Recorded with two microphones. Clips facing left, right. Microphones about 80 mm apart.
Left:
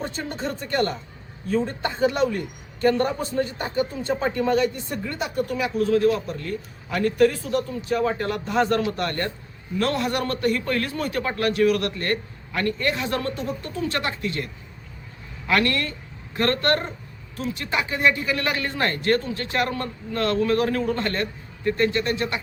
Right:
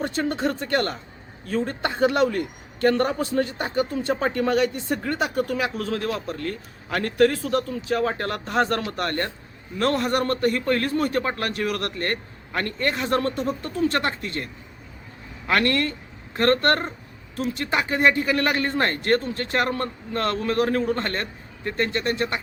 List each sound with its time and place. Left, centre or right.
0.0 s speech: right
4.0 s a man's voice: right
15.4 s a man's voice: right